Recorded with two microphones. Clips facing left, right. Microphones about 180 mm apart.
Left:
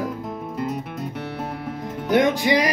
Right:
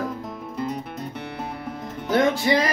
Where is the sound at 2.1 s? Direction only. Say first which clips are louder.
Left 1 dB; 15° left (ahead or behind).